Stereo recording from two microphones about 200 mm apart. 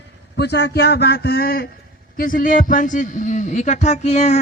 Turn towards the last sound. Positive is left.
turn(degrees=35)  # may be behind; listen again after turning